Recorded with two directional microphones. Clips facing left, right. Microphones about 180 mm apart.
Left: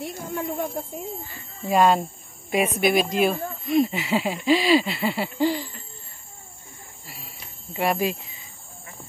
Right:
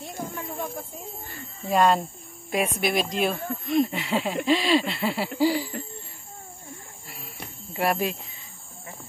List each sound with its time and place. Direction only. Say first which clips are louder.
0.0 s speech: left 4 dB; 60° left (ahead or behind)
1.7 s speech: left 2 dB; centre (ahead or behind)
5.4 s hoot: right 1 dB; 10° right (ahead or behind)
7.7 s speech: left 2 dB; centre (ahead or behind)